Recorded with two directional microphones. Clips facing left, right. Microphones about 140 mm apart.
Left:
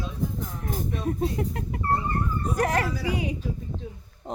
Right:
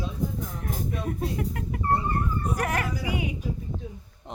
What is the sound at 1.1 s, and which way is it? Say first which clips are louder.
Speech: left 6 dB; 30° left (ahead or behind).